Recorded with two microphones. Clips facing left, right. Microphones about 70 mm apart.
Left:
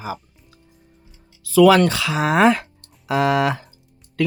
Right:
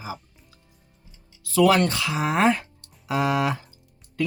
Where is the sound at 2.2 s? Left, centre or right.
Left.